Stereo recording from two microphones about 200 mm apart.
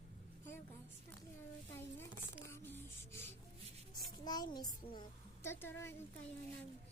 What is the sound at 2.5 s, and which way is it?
Music, 10° left (ahead or behind).